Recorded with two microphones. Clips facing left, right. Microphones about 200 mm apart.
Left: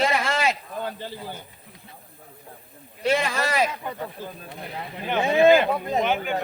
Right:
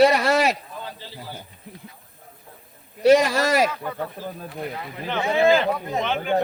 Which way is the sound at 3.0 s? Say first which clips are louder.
Right 7 dB; 40° right (ahead or behind).